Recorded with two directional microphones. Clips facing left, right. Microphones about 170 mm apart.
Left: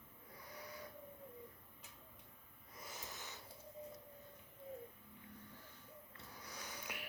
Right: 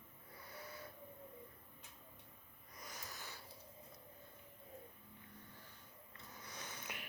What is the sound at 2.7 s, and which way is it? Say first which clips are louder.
Wheeze: left 1 dB; 25° left (ahead or behind).